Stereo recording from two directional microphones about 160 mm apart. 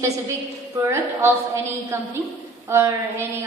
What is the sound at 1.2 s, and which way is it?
A woman's voice, 15° right (ahead or behind).